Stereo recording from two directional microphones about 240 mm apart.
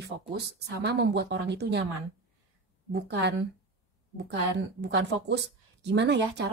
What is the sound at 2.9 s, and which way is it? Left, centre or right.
Speech, right.